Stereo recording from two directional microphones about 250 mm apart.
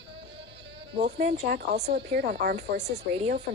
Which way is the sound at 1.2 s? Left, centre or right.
Right.